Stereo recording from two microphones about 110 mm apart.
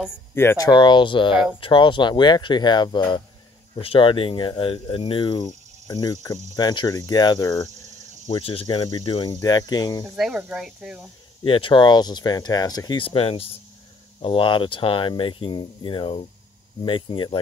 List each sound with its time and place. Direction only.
0.3 s speech: 20° left (ahead or behind)
0.6 s speech: 40° left (ahead or behind)
3.7 s speech: 55° left (ahead or behind); by 7.7 s 30° left (ahead or behind)
8.3 s speech: 55° left (ahead or behind)
8.6 s speech: 40° left (ahead or behind)
10.1 s speech: 5° right (ahead or behind)
11.4 s speech: 50° left (ahead or behind)
13.0 s speech: 60° left (ahead or behind)